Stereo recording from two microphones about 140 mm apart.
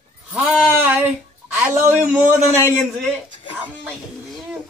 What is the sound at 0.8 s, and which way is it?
A man's voice, 15° right (ahead or behind).